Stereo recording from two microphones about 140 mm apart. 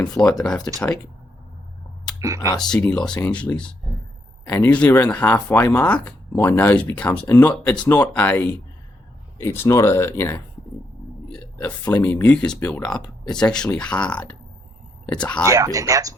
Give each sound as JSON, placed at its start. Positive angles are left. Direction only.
{"t": 0.2, "sound": "speech", "side_deg": 5}
{"t": 2.1, "sound": "speech", "side_deg": -20}
{"t": 2.6, "sound": "speech", "side_deg": 5}
{"t": 11.9, "sound": "speech", "side_deg": 10}
{"t": 15.5, "sound": "speech", "side_deg": -25}